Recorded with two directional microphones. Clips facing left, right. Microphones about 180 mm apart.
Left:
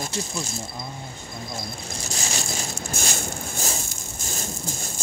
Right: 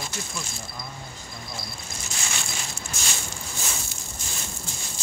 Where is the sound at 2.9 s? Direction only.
50° left (ahead or behind).